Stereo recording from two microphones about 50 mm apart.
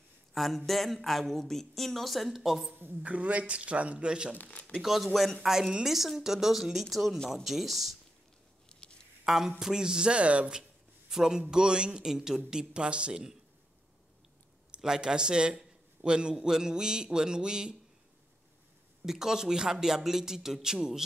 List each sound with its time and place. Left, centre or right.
0.3 s a sound: centre
0.7 s speech: centre
2.7 s a man's voice: right
3.0 s a man's voice: right
4.4 s speech: left
4.8 s speech: centre
8.8 s a sound: centre
9.2 s a man's voice: centre
11.1 s a man's voice: centre
14.8 s a man's voice: centre
19.0 s a man's voice: centre